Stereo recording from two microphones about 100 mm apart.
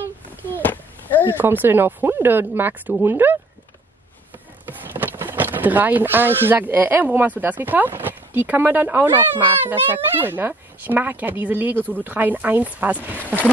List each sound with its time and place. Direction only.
0.7 s a sound: 20° left (ahead or behind)
1.2 s speech: 20° right (ahead or behind)
4.6 s speech: 20° right (ahead or behind)